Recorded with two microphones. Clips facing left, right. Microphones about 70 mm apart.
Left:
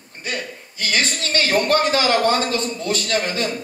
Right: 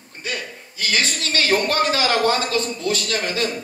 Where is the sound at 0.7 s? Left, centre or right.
Left.